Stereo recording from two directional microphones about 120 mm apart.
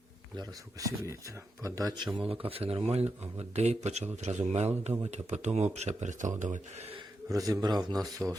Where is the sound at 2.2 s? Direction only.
50° right (ahead or behind); by 6.9 s 70° right (ahead or behind).